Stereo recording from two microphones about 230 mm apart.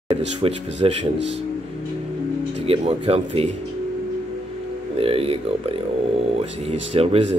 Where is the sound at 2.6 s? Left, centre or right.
Right.